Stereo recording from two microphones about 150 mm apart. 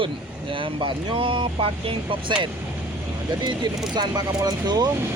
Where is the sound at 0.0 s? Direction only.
35° right (ahead or behind).